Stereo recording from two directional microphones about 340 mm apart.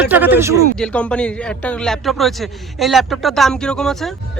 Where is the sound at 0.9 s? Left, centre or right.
Centre.